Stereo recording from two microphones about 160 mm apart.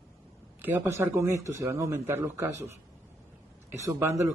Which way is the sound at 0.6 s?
15° right (ahead or behind).